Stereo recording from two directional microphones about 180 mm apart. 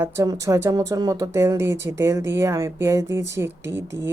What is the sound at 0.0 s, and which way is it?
Speech, 15° right (ahead or behind).